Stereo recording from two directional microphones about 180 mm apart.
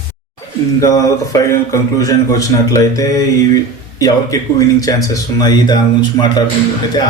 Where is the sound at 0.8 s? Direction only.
20° left (ahead or behind).